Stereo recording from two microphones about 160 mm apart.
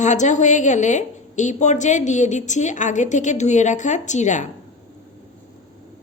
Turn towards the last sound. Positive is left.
turn(degrees=50)  # may be behind; listen again after turning